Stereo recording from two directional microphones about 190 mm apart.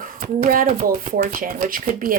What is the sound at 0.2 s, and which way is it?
Speech, 45° right (ahead or behind).